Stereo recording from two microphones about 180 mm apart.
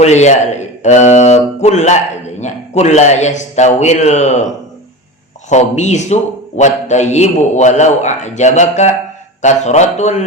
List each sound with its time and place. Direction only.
0.0 s a man's voice: 40° left (ahead or behind)
5.5 s a man's voice: 40° left (ahead or behind)